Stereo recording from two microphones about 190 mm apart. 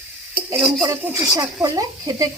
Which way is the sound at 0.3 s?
10° right (ahead or behind).